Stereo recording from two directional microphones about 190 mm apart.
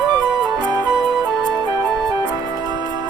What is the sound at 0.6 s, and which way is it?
Music, 20° right (ahead or behind).